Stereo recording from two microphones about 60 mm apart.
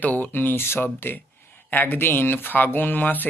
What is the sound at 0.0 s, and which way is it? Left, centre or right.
Speech, left.